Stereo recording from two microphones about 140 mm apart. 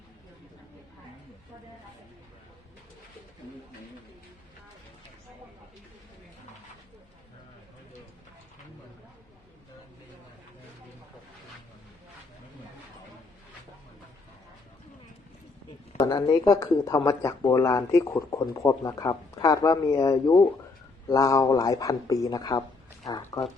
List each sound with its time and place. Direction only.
16.0 s speech: 25° left (ahead or behind)